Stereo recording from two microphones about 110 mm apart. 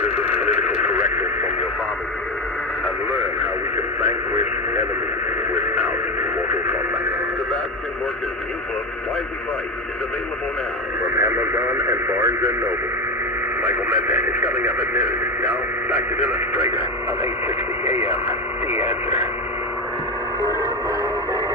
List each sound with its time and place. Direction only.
0.3 s radio: 10° right (ahead or behind)
11.2 s radio: 20° right (ahead or behind)
13.6 s radio: 10° right (ahead or behind)
18.0 s radio: 60° left (ahead or behind)